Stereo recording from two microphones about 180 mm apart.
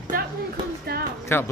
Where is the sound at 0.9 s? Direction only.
60° right (ahead or behind).